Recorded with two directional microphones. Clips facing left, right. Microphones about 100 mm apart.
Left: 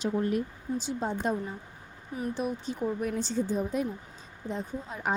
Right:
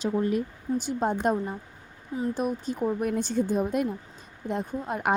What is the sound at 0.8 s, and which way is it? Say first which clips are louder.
Speech: right 5 dB; 55° right (ahead or behind).